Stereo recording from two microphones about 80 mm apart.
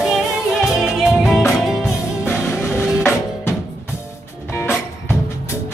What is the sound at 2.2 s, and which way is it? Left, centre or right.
Music, left.